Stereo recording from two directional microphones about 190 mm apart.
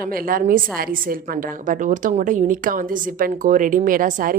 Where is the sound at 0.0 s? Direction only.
50° right (ahead or behind).